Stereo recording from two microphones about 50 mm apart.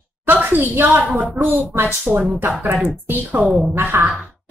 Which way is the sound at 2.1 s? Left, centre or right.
Centre.